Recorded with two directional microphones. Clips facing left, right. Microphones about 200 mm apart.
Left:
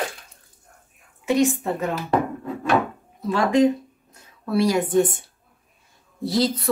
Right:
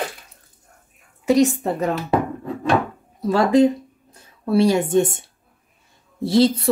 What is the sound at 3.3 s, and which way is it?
A woman's voice, 35° right (ahead or behind).